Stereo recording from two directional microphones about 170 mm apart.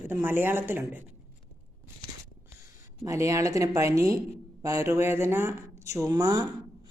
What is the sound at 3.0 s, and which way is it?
A woman's voice, 20° right (ahead or behind).